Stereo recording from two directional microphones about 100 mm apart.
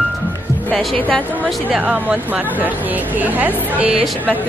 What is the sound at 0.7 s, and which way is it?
Speech, 15° left (ahead or behind).